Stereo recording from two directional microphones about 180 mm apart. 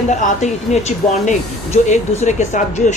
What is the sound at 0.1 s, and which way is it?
Speech, 40° left (ahead or behind).